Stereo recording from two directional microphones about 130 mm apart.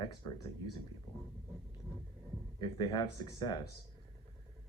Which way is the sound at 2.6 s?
35° left (ahead or behind).